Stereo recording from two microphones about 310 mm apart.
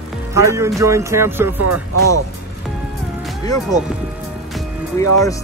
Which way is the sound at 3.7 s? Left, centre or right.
Centre.